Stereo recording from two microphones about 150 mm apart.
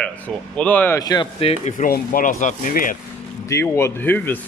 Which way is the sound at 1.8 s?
65° left (ahead or behind).